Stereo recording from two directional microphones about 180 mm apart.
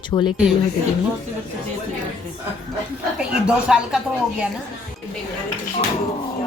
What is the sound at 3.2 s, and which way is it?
Speech, 5° right (ahead or behind).